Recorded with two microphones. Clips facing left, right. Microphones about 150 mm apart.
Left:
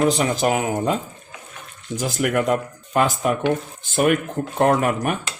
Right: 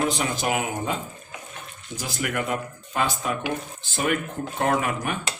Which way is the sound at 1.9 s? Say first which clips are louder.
Left 7 dB; 45° left (ahead or behind).